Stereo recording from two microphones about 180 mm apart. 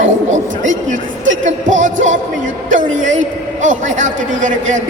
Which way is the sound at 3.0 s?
45° right (ahead or behind).